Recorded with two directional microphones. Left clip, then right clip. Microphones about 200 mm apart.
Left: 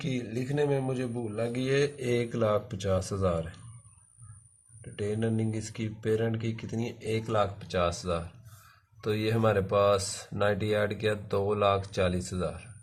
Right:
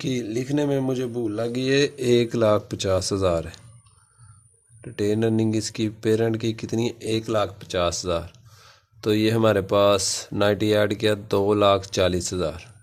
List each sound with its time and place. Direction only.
0.0 s speech: 50° right (ahead or behind)
4.8 s speech: 50° right (ahead or behind)